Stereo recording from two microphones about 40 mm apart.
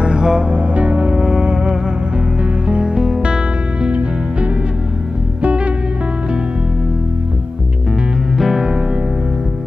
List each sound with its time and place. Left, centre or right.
0.0 s music: centre
5.4 s music: right
8.4 s music: centre